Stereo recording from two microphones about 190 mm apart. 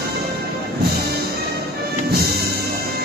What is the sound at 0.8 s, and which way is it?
Music, 55° right (ahead or behind).